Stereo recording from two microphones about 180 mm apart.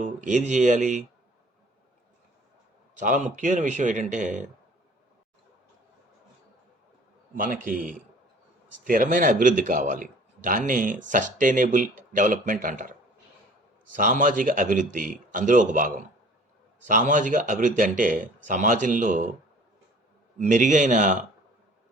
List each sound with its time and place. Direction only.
0.0 s speech: 45° right (ahead or behind)
3.0 s speech: 45° right (ahead or behind)
7.3 s speech: 50° right (ahead or behind)
13.9 s speech: 45° right (ahead or behind)
20.4 s speech: 45° right (ahead or behind)